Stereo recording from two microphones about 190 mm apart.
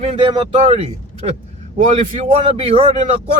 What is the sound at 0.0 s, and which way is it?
Speech, 30° right (ahead or behind).